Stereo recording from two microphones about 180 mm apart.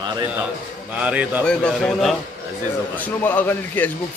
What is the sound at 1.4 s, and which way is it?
A man's voice, 5° left (ahead or behind).